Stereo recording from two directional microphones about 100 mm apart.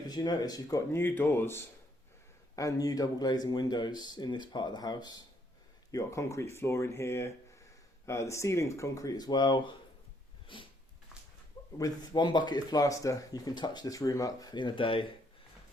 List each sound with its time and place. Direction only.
0.1 s speech: 40° left (ahead or behind)
0.9 s speech: 20° left (ahead or behind)
2.6 s speech: 35° left (ahead or behind)
10.4 s a sound: 55° left (ahead or behind)
11.8 s speech: 45° left (ahead or behind)